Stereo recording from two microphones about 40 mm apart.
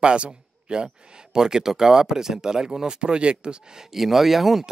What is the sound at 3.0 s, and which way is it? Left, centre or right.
Speech, right.